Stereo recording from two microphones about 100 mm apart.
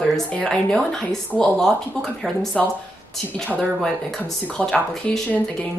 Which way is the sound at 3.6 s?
5° left (ahead or behind).